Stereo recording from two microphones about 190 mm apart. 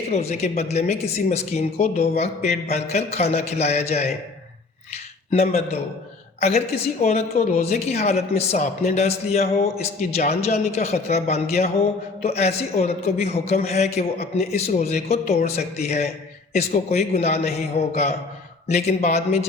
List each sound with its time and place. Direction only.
0.1 s a woman's voice: 35° left (ahead or behind)
5.3 s a woman's voice: 35° left (ahead or behind)